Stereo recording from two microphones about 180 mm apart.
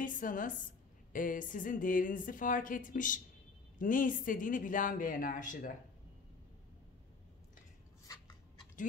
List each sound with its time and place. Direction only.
0.0 s a woman's voice: 50° left (ahead or behind)